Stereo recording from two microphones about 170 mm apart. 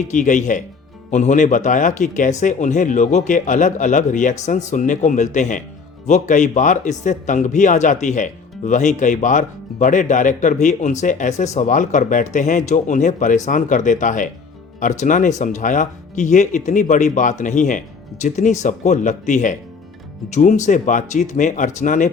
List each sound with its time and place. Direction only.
0.1 s speech: 50° left (ahead or behind)